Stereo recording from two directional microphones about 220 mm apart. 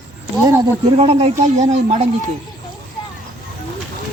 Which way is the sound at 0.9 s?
30° right (ahead or behind).